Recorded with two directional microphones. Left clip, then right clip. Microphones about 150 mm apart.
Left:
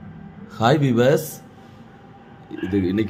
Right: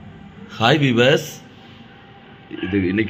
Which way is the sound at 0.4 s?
10° left (ahead or behind).